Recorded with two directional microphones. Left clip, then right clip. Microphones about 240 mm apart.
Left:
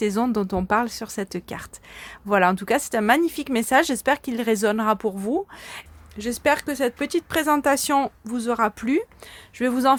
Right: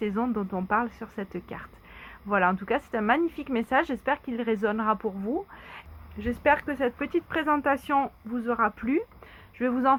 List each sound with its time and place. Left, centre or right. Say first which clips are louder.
0.0 s speech: left 6 dB; left
6.4 s speech: left 3 dB; left